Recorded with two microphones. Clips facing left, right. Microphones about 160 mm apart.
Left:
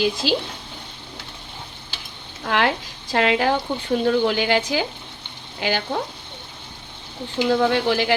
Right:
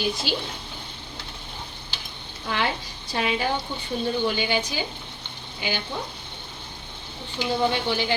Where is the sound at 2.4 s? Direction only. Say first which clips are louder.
Left 6 dB; 85° left.